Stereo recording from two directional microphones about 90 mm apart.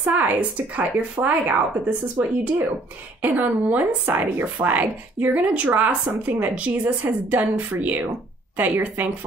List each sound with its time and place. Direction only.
0.0 s a woman's voice: 15° right (ahead or behind)